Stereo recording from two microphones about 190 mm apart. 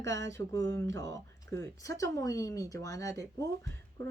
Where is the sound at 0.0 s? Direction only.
75° right (ahead or behind).